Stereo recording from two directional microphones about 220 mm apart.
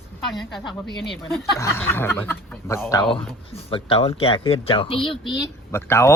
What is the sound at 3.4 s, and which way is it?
Speech, 25° left (ahead or behind).